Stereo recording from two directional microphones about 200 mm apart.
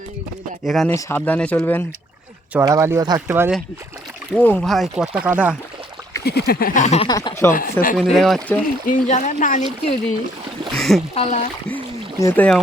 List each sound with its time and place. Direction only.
0.6 s speech: centre (ahead or behind)
0.9 s speech: 15° left (ahead or behind)
2.5 s speech: 15° right (ahead or behind)
4.4 s speech: 5° left (ahead or behind)
6.2 s a sound: 50° left (ahead or behind); by 7.1 s 35° left (ahead or behind)
7.1 s speech: 20° left (ahead or behind)
7.5 s a sound: 45° left (ahead or behind)
7.9 s speech: centre (ahead or behind)
8.9 s speech: 40° left (ahead or behind)
10.8 s a sound: centre (ahead or behind)
11.1 s speech: 30° left (ahead or behind)
12.2 s speech: 5° left (ahead or behind)